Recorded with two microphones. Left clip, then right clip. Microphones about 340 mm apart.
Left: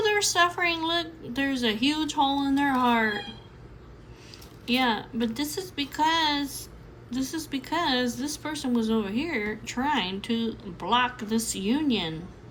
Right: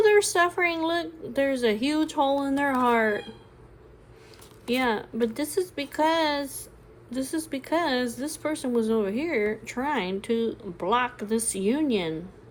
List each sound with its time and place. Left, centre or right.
0.0 s a woman's voice: centre
4.6 s a woman's voice: centre